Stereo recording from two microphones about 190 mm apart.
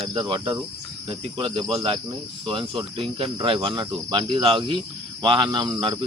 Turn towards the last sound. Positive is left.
turn(degrees=-25)  # may be behind; listen again after turning